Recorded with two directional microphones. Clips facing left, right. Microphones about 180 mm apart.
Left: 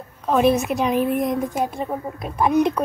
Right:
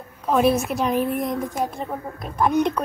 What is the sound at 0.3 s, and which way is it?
A woman's voice, centre (ahead or behind).